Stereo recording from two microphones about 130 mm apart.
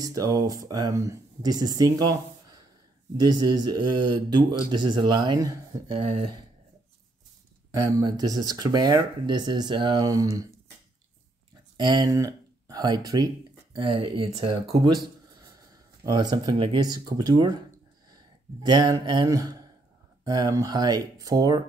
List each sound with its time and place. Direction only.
0.0 s speech: 25° right (ahead or behind)
5.9 s speech: 50° right (ahead or behind)
7.7 s speech: 25° right (ahead or behind)
11.7 s speech: 35° right (ahead or behind)
13.8 s speech: 40° right (ahead or behind)
16.0 s speech: 30° right (ahead or behind)
18.7 s speech: 30° right (ahead or behind)